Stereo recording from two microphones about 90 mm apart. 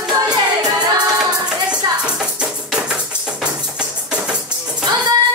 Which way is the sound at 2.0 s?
10° right (ahead or behind).